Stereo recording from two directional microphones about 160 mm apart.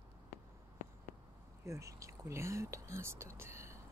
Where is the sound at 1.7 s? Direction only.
20° right (ahead or behind).